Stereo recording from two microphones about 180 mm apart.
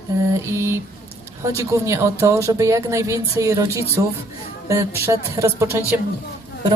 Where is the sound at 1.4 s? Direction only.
15° right (ahead or behind).